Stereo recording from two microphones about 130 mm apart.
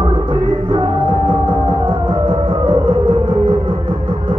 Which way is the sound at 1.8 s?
35° right (ahead or behind).